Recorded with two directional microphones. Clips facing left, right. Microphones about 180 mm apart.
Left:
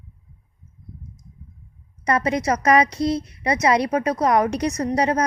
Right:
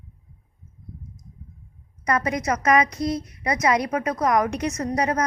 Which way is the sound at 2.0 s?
30° left (ahead or behind).